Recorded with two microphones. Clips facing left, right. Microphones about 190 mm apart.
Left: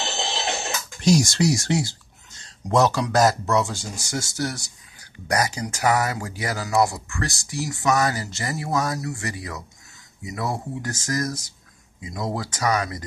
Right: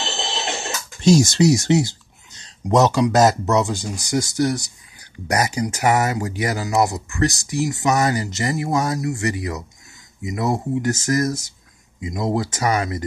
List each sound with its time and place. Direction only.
1.0 s speech: 25° right (ahead or behind)